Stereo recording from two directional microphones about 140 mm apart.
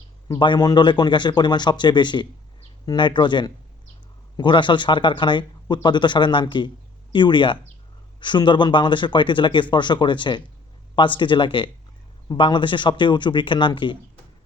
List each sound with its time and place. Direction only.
0.3 s speech: 35° left (ahead or behind)